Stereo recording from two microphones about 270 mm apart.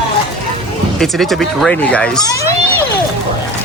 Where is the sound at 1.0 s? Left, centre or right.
Centre.